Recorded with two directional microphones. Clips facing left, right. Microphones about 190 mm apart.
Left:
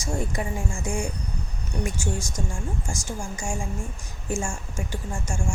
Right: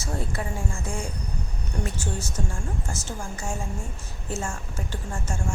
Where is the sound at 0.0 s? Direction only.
15° left (ahead or behind).